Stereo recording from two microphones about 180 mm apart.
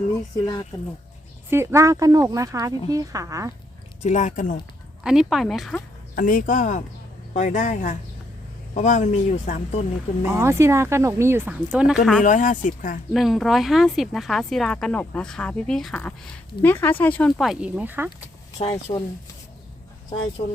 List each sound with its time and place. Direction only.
1.5 s speech: 15° right (ahead or behind)
4.0 s speech: 40° left (ahead or behind)
5.0 s speech: centre (ahead or behind)
6.1 s speech: 50° left (ahead or behind)
10.2 s speech: 15° right (ahead or behind)
12.2 s speech: 45° left (ahead or behind)
13.1 s speech: centre (ahead or behind)
18.6 s speech: 30° left (ahead or behind)
20.4 s speech: 40° left (ahead or behind)